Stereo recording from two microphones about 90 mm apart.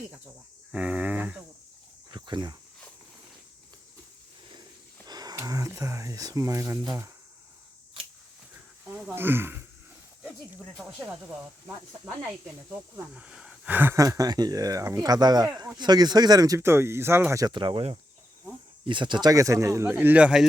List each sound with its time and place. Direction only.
0.7 s speech: 15° right (ahead or behind)
2.0 s cricket: 55° right (ahead or behind)
5.0 s a sound: 45° right (ahead or behind)
5.5 s speech: 35° right (ahead or behind)
9.1 s speech: 25° right (ahead or behind)
13.1 s a sound: 10° right (ahead or behind)
13.7 s speech: 20° right (ahead or behind)
13.9 s speech: 35° right (ahead or behind)
16.6 s speech: 30° right (ahead or behind)
17.5 s speech: 65° right (ahead or behind)
18.9 s speech: 60° right (ahead or behind)
19.3 s speech: 40° right (ahead or behind); by 20.4 s 15° right (ahead or behind)